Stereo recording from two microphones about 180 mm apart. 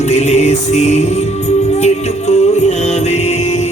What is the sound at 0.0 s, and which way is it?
Music, 40° left (ahead or behind).